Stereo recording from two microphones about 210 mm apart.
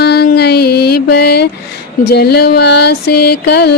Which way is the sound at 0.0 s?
50° left (ahead or behind).